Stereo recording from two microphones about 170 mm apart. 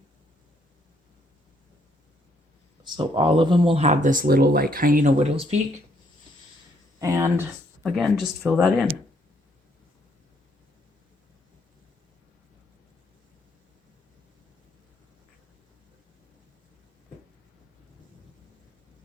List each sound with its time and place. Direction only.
2.8 s speech: 30° right (ahead or behind); by 5.1 s 55° right (ahead or behind)
5.2 s speech: 40° right (ahead or behind)
7.0 s speech: 15° right (ahead or behind)
7.9 s speech: centre (ahead or behind)